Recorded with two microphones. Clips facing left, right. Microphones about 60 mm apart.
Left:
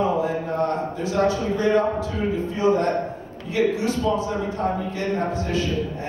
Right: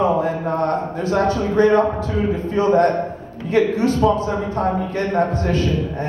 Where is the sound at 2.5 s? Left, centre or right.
Right.